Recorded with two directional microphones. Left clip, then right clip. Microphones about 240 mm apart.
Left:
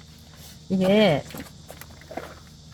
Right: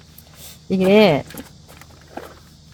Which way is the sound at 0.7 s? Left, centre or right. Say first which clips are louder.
Right 6 dB; right.